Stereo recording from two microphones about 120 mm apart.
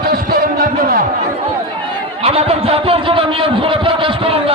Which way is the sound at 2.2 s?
55° right (ahead or behind).